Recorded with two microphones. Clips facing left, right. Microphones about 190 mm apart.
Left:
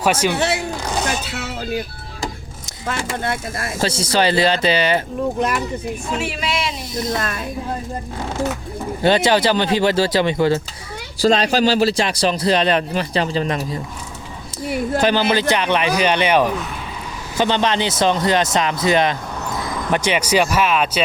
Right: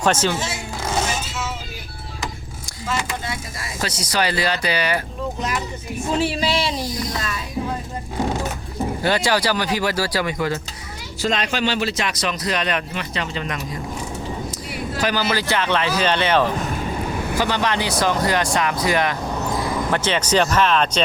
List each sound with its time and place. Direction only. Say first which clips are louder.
0.0 s a man's voice: left 1 dB; 10° left (ahead or behind)
0.3 s speech: left 7 dB; 65° left (ahead or behind)
1.3 s a sound: left 5 dB; 65° left (ahead or behind)
3.8 s speech: left 4 dB; 30° left (ahead or behind)
6.1 s speech: right 5 dB; 30° right (ahead or behind)
6.9 s speech: left 4 dB; 25° left (ahead or behind)
7.2 s speech: left 3 dB; 55° left (ahead or behind)
9.0 s speech: left 5 dB; 25° left (ahead or behind)
15.0 s a man's voice: left 4 dB; 25° left (ahead or behind)
19.9 s a man's voice: left 4 dB; 10° left (ahead or behind)